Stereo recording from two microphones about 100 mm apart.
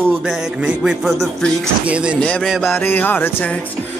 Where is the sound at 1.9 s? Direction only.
10° right (ahead or behind).